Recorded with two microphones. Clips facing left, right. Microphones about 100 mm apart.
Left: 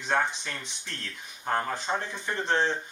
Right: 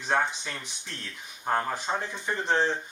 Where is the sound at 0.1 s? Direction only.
10° right (ahead or behind).